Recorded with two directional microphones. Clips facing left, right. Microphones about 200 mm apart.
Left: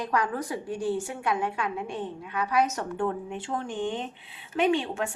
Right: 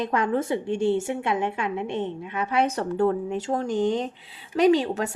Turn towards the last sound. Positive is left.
turn(degrees=-40)  # may be behind; listen again after turning